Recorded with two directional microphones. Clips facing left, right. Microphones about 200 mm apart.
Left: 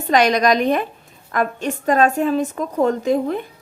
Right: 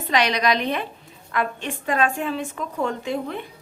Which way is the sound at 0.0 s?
45° left (ahead or behind).